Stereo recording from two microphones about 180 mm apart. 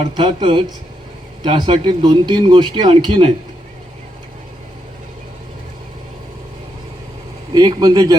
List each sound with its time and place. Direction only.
0.0 s speech: 30° right (ahead or behind)
7.5 s speech: 20° right (ahead or behind)